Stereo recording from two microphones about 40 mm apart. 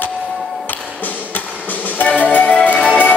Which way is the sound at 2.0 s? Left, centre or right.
Left.